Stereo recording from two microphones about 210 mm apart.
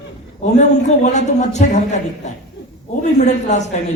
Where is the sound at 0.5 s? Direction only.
35° left (ahead or behind).